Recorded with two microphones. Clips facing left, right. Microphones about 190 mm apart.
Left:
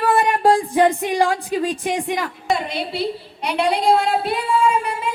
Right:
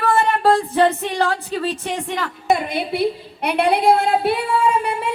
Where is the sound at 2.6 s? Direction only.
55° right (ahead or behind).